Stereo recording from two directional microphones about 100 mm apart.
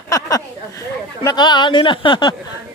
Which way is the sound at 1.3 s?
50° left (ahead or behind).